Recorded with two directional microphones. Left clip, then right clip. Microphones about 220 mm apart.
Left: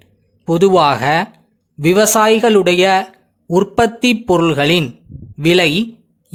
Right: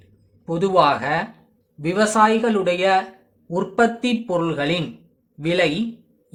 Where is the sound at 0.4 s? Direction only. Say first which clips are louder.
Left 6 dB; 45° left (ahead or behind).